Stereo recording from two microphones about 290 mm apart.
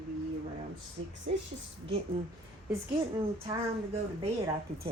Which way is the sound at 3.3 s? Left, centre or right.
Centre.